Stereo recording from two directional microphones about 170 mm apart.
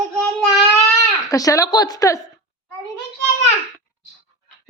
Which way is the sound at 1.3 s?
20° left (ahead or behind).